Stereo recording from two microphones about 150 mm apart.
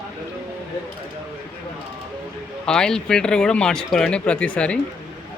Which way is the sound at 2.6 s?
5° left (ahead or behind).